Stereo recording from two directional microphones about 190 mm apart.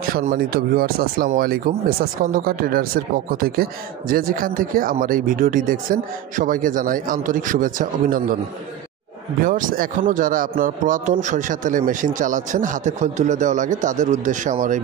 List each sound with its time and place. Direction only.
0.0 s speech: 50° right (ahead or behind)
9.4 s speech: 45° right (ahead or behind)